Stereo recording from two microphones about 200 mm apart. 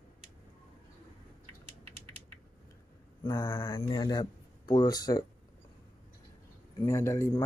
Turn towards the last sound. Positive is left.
turn(degrees=15)  # may be behind; listen again after turning